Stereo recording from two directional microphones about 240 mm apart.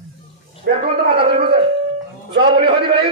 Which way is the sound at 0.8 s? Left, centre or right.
Right.